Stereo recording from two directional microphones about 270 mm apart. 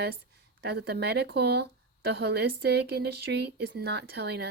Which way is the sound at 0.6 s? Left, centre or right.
Right.